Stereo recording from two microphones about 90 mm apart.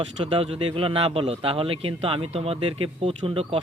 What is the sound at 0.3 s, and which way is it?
Speech, 90° right.